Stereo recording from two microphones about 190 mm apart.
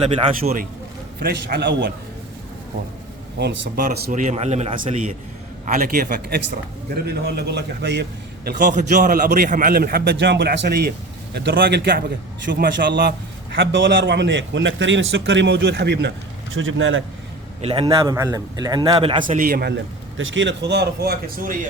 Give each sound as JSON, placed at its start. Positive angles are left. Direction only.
{"t": 0.0, "sound": "a man's voice", "side_deg": -30}
{"t": 1.2, "sound": "a man's voice", "side_deg": -55}
{"t": 3.3, "sound": "a man's voice", "side_deg": -65}
{"t": 3.8, "sound": "a man's voice", "side_deg": -50}
{"t": 5.6, "sound": "a man's voice", "side_deg": -45}
{"t": 8.4, "sound": "a man's voice", "side_deg": -50}
{"t": 13.6, "sound": "a man's voice", "side_deg": -70}
{"t": 16.6, "sound": "a man's voice", "side_deg": -90}
{"t": 17.6, "sound": "a man's voice", "side_deg": -30}
{"t": 19.2, "sound": "a man's voice", "side_deg": -45}